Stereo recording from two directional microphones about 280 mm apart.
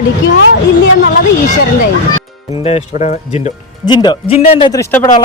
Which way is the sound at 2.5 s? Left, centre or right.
Left.